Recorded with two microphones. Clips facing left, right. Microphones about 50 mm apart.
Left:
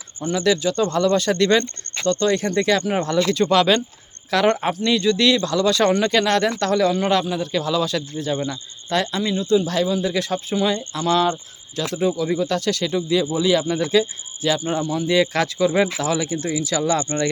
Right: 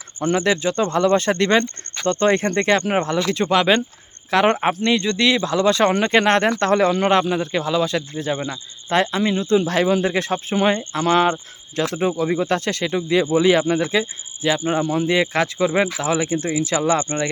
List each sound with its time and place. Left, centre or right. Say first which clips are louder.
0.3 s speech: left 1 dB; right
3.1 s speech: left 1 dB; right
5.1 s speech: even; centre; by 9.6 s right
9.6 s speech: right 2 dB; right